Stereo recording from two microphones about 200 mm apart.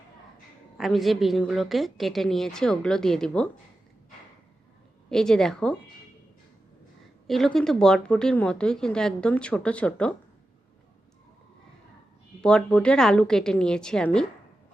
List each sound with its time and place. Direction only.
0.8 s speech: centre (ahead or behind)
5.0 s speech: 5° left (ahead or behind)
7.3 s speech: centre (ahead or behind)
12.4 s speech: 5° left (ahead or behind)